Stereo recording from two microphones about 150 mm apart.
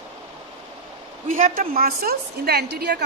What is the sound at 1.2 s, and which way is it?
A woman's voice, 60° right (ahead or behind).